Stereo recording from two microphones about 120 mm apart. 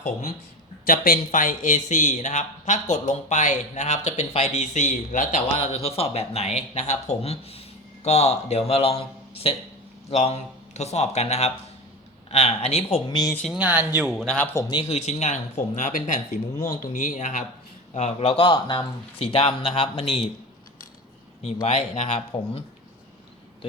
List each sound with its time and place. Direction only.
0.9 s a man's voice: 90° left
5.5 s speech: 55° left (ahead or behind)
10.1 s speech: 65° left (ahead or behind)
13.1 s speech: 35° left (ahead or behind)
13.5 s speech: 10° right (ahead or behind)
14.3 s a man's voice: 15° left (ahead or behind)
14.8 s a man's voice: 60° left (ahead or behind); by 17.4 s 90° left
17.9 s speech: 65° left (ahead or behind); by 20.2 s 50° left (ahead or behind)
21.4 s speech: 65° left (ahead or behind)